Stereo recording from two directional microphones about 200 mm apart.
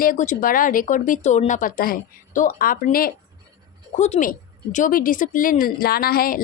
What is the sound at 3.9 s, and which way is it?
Speech, 35° left (ahead or behind).